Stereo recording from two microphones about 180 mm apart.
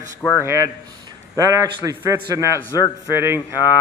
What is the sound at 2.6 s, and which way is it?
Speech, 15° left (ahead or behind).